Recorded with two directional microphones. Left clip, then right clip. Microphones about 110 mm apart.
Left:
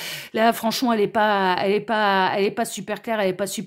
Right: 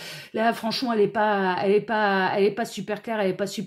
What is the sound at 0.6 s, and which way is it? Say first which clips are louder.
Speech: left 5 dB; 50° left (ahead or behind).